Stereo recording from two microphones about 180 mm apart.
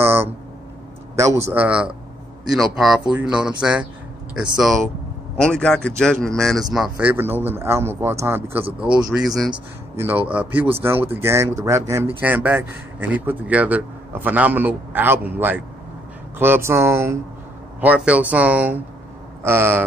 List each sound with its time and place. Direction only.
0.0 s a sound: 15° right (ahead or behind)
1.1 s a man's voice: 15° right (ahead or behind)
8.6 s speech: 30° right (ahead or behind)
9.9 s speech: 10° right (ahead or behind)